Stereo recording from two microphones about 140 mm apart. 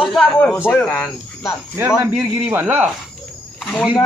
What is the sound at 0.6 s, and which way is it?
Speech, 15° left (ahead or behind).